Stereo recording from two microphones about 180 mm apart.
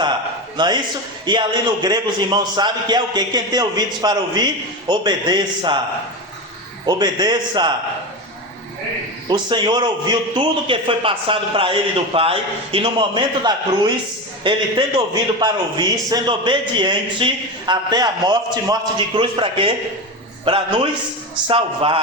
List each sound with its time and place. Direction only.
0.5 s a man's voice: 25° right (ahead or behind)
6.8 s a man's voice: 25° right (ahead or behind)
9.3 s a man's voice: 25° right (ahead or behind)